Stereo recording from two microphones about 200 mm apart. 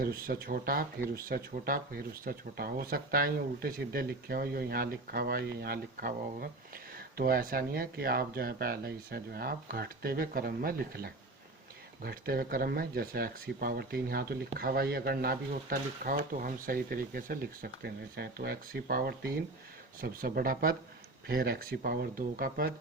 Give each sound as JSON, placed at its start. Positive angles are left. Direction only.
{"t": 0.0, "sound": "speech", "side_deg": -45}